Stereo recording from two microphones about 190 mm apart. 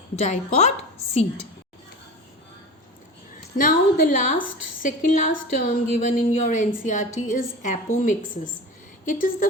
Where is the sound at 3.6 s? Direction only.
50° left (ahead or behind).